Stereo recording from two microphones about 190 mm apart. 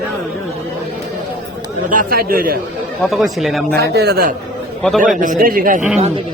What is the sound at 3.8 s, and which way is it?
A man's voice, 55° right (ahead or behind).